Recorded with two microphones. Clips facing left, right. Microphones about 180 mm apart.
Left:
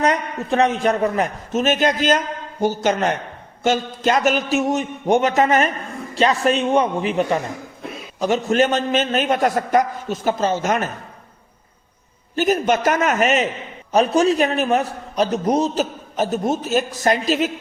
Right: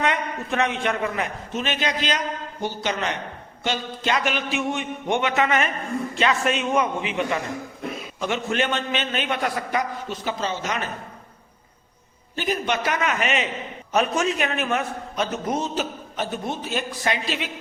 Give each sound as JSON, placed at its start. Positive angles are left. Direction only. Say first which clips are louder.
{"t": 0.0, "sound": "a man's voice", "louder": "left 5 dB", "side_deg": 40}
{"t": 12.4, "sound": "a man's voice", "louder": "left 7 dB", "side_deg": 45}